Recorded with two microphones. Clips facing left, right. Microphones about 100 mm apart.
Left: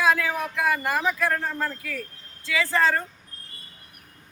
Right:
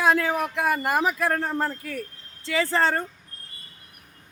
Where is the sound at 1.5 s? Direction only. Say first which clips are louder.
Right 2 dB; 40° right (ahead or behind).